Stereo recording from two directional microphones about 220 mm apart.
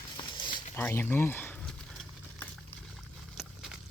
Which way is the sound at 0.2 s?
20° left (ahead or behind).